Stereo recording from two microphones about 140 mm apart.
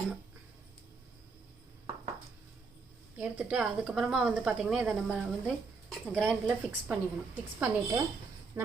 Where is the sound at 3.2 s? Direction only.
10° right (ahead or behind).